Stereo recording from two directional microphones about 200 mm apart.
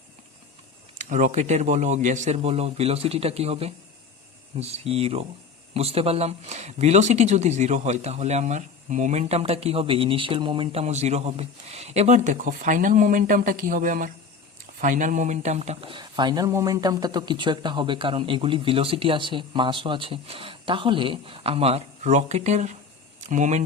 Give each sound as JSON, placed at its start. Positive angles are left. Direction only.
{"t": 1.1, "sound": "speech", "side_deg": -35}